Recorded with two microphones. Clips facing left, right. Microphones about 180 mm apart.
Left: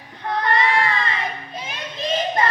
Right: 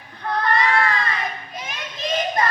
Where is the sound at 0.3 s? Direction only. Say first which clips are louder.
Even; 20° left (ahead or behind).